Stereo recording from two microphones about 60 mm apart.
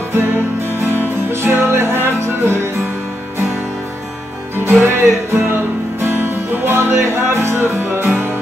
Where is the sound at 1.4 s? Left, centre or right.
Right.